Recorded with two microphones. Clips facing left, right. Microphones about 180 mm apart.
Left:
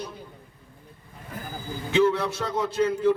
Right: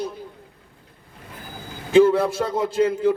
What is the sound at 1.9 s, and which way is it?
Speech, 40° right (ahead or behind).